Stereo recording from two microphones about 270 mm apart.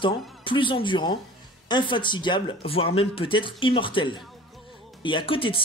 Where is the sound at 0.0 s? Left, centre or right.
Centre.